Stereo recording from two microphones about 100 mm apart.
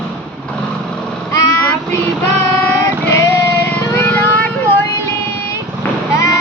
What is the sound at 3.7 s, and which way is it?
Vehicle, 15° left (ahead or behind).